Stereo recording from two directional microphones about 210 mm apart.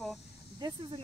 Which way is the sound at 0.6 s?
25° right (ahead or behind).